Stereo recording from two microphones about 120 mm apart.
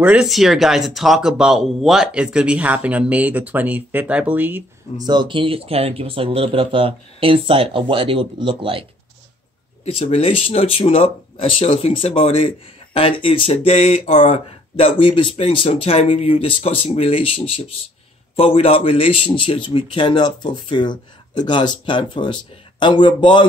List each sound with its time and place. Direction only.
0.0 s speech: 10° right (ahead or behind)
4.9 s speech: 35° right (ahead or behind)
9.8 s speech: 55° left (ahead or behind)